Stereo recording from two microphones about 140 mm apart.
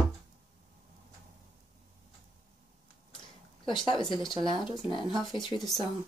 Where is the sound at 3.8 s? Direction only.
35° left (ahead or behind).